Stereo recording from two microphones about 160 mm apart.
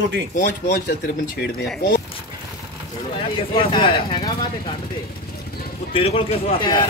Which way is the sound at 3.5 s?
30° left (ahead or behind).